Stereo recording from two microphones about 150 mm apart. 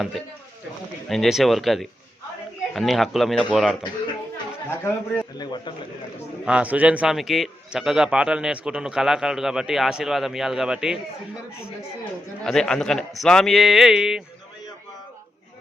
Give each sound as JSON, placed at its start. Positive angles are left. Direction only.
{"t": 1.0, "sound": "a man's voice", "side_deg": 0}
{"t": 4.8, "sound": "speech", "side_deg": 15}
{"t": 5.4, "sound": "speech", "side_deg": 30}
{"t": 6.4, "sound": "a man's voice", "side_deg": -10}
{"t": 12.5, "sound": "a man's voice", "side_deg": 5}